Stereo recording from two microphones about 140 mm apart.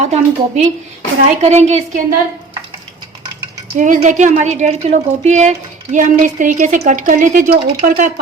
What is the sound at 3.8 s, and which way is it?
A woman's voice, 65° right (ahead or behind).